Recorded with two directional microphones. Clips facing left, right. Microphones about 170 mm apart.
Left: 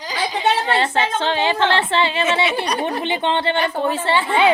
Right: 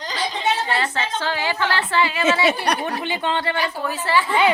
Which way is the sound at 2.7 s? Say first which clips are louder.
Even; 60° right (ahead or behind).